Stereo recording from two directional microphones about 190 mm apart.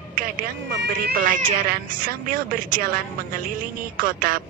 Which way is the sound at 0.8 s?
50° right (ahead or behind).